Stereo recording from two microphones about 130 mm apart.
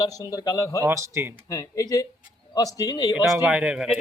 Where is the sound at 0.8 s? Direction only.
20° right (ahead or behind).